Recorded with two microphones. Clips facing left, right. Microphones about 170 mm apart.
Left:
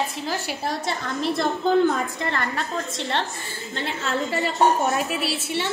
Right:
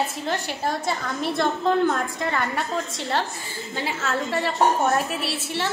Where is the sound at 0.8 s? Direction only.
Centre (ahead or behind).